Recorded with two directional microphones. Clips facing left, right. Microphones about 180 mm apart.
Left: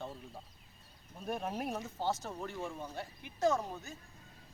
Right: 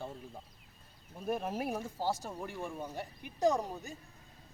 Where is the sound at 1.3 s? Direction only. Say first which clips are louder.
Right 2 dB; 5° right (ahead or behind).